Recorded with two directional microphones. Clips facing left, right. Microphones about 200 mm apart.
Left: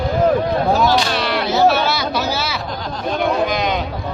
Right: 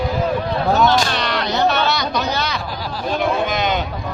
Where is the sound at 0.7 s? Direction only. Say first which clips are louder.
Even; centre (ahead or behind).